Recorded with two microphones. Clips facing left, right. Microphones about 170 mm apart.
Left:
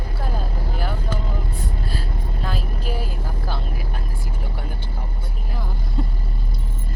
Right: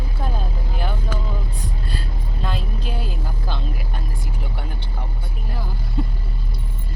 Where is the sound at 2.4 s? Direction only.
5° left (ahead or behind).